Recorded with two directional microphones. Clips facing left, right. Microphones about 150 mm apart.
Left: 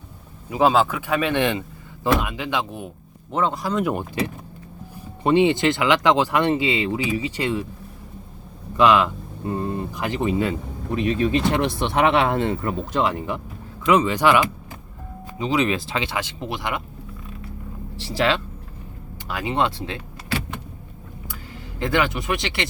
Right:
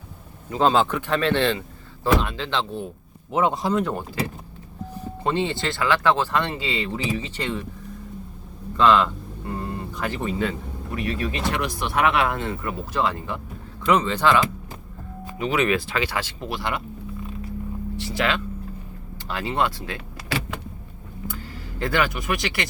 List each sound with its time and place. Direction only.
0.5 s speech: 5° left (ahead or behind)
3.3 s speech: 5° right (ahead or behind)
3.8 s speech: 15° left (ahead or behind)
5.2 s speech: 15° left (ahead or behind)
8.7 s speech: 15° left (ahead or behind)
15.4 s speech: 25° left (ahead or behind)
18.2 s speech: 30° left (ahead or behind)
19.3 s speech: 15° left (ahead or behind)
21.8 s speech: 20° left (ahead or behind)